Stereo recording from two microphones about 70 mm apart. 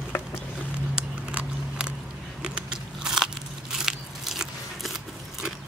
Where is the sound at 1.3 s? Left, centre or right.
Centre.